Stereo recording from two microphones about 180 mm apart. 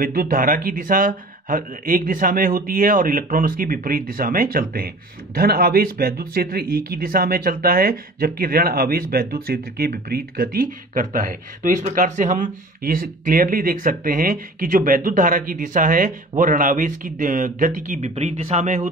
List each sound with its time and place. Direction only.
0.0 s speech: 55° right (ahead or behind)